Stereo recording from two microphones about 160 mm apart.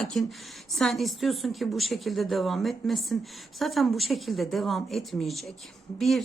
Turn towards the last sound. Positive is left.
turn(degrees=0)  # may be behind; listen again after turning